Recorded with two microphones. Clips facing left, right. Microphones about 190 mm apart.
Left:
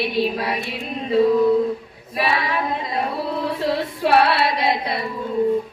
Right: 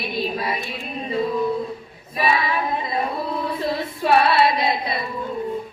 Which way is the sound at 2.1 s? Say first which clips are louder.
Even; 70° left (ahead or behind).